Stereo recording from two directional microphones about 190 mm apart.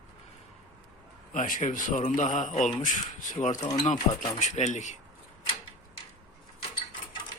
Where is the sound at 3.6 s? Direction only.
20° left (ahead or behind).